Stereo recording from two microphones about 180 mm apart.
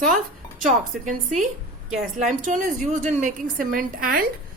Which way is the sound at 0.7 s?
40° right (ahead or behind).